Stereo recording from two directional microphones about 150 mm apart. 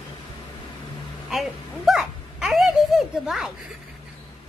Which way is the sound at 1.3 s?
Centre (ahead or behind).